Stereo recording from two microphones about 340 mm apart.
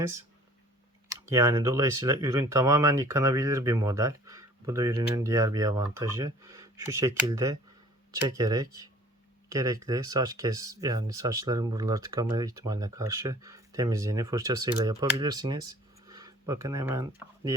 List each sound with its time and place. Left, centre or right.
1.1 s speech: centre